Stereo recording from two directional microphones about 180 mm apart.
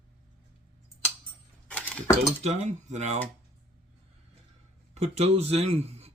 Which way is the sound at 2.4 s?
40° right (ahead or behind).